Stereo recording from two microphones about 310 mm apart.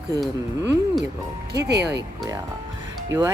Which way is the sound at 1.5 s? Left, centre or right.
Right.